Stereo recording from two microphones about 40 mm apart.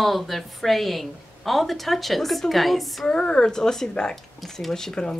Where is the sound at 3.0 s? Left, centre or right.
Left.